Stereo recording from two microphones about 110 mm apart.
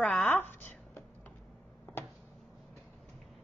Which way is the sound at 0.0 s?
Centre (ahead or behind).